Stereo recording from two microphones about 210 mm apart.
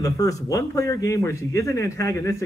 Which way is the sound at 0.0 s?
15° left (ahead or behind).